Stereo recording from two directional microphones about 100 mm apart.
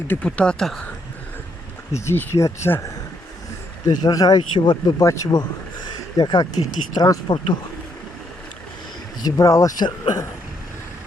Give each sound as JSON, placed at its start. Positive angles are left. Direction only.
{"t": 0.1, "sound": "speech", "side_deg": 15}
{"t": 1.9, "sound": "speech", "side_deg": 25}
{"t": 3.8, "sound": "speech", "side_deg": 35}
{"t": 4.9, "sound": "speech", "side_deg": 35}
{"t": 5.3, "sound": "a sound", "side_deg": 45}
{"t": 6.7, "sound": "speech", "side_deg": 40}
{"t": 9.2, "sound": "speech", "side_deg": 35}
{"t": 9.8, "sound": "speech", "side_deg": 45}